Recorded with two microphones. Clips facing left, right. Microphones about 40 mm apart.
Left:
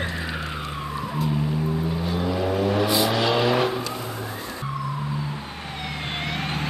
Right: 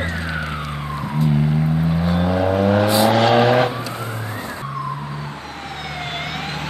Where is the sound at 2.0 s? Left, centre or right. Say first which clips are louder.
Right 6 dB; right.